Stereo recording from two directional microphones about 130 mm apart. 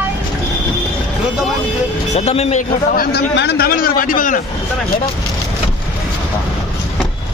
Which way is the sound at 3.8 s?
90° left.